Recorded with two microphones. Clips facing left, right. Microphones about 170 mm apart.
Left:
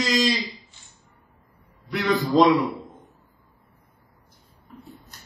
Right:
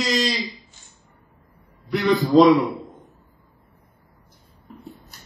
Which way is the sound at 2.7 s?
35° right (ahead or behind).